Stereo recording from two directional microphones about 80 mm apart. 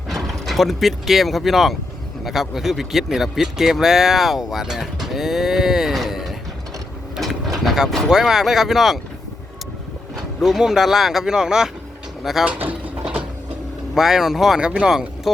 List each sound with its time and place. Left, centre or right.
0.1 s a man's voice: centre
10.4 s a man's voice: centre
12.5 s a sound: centre
13.9 s a man's voice: centre